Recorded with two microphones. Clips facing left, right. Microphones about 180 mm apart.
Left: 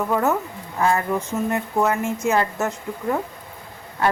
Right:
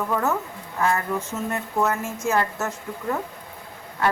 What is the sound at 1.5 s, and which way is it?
Speech, 15° left (ahead or behind).